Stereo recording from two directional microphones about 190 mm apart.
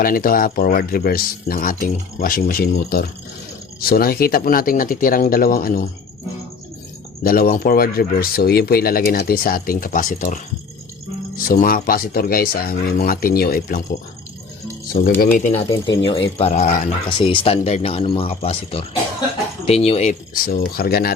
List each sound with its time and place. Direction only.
0.0 s speech: 50° left (ahead or behind)
7.3 s speech: 50° left (ahead or behind)
11.4 s speech: 50° left (ahead or behind)
15.2 s speech: 45° left (ahead or behind)
16.0 s speech: 30° left (ahead or behind); by 21.1 s 50° left (ahead or behind)